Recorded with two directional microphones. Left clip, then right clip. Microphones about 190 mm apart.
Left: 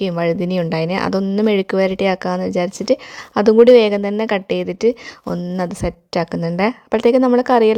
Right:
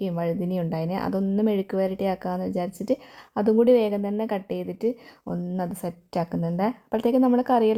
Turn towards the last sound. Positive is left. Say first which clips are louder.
# left 8 dB
turn(degrees=15)  # may be behind; listen again after turning